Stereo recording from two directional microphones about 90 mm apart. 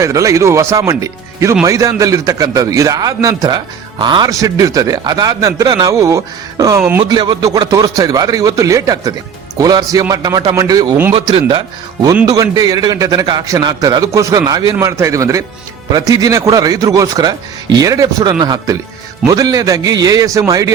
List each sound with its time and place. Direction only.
0.0 s a man's voice: 35° right (ahead or behind)
3.9 s speech: 60° right (ahead or behind)
4.3 s a man's voice: 40° right (ahead or behind)
7.0 s speech: 55° right (ahead or behind)
7.4 s a man's voice: 40° right (ahead or behind)
11.1 s speech: 90° right
12.2 s a man's voice: 40° right (ahead or behind)